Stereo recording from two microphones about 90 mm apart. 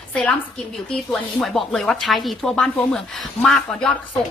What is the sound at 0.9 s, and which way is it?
A woman's voice, 5° left (ahead or behind).